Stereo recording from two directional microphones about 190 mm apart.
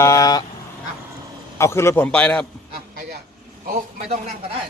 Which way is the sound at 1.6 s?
15° left (ahead or behind).